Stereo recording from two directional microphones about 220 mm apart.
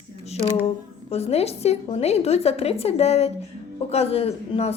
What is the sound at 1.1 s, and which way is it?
A woman's voice, 30° left (ahead or behind).